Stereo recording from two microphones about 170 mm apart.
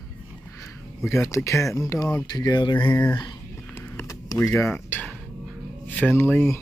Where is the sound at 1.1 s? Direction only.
15° left (ahead or behind).